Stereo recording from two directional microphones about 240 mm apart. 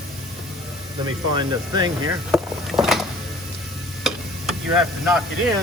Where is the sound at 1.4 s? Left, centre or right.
Centre.